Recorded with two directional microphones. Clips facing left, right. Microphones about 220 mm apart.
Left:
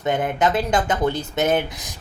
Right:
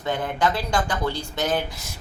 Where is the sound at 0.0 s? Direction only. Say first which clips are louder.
Left 4 dB; 20° left (ahead or behind).